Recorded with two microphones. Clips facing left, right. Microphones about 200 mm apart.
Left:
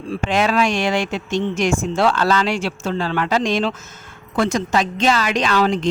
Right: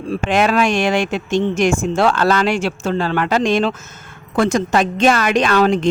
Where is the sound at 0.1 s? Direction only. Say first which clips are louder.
Right 3 dB; 50° right (ahead or behind).